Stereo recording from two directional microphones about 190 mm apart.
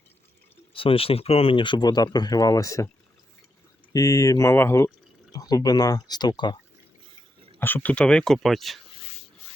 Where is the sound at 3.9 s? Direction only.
15° left (ahead or behind).